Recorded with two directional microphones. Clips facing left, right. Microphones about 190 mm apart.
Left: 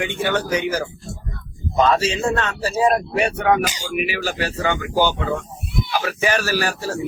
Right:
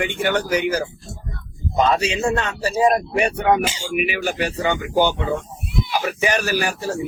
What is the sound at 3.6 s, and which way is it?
Speech, 25° right (ahead or behind).